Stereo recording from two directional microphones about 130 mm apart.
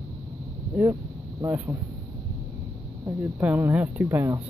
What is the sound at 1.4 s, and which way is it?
Speech, 15° right (ahead or behind).